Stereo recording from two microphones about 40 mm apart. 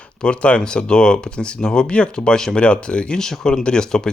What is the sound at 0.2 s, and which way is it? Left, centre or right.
Speech, left.